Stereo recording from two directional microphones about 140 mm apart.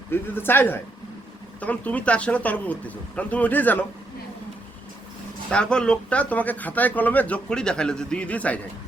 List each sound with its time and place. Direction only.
0.1 s speech: 15° left (ahead or behind)
5.5 s speech: 5° left (ahead or behind)